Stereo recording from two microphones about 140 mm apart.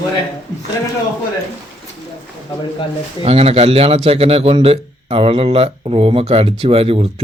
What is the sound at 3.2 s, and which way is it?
A man's voice, 45° right (ahead or behind).